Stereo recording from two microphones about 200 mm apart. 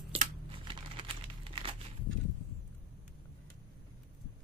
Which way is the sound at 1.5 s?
25° right (ahead or behind).